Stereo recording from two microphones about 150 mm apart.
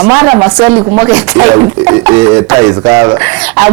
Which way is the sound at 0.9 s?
15° right (ahead or behind).